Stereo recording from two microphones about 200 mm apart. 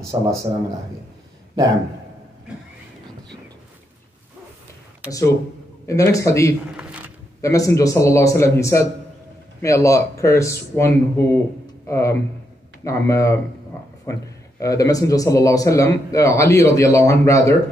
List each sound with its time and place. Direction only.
0.0 s a man's voice: 15° right (ahead or behind)
5.9 s speech: 15° left (ahead or behind)
6.8 s a sound: 5° right (ahead or behind)
7.4 s speech: 15° left (ahead or behind)
14.6 s speech: 15° left (ahead or behind)